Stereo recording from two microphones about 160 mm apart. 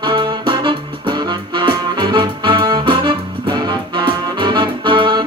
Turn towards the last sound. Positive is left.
turn(degrees=-30)  # may be behind; listen again after turning